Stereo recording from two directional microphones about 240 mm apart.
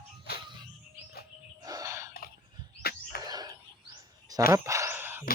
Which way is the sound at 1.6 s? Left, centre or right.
Centre.